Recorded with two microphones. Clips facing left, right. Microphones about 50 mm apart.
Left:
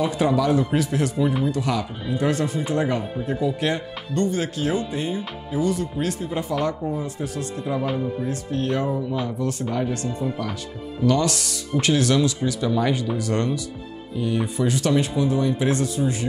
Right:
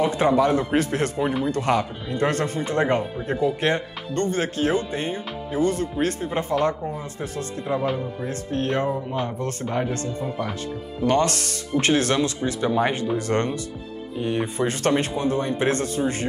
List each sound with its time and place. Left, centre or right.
0.0 s speech: right
7.7 s speech: right
11.1 s speech: right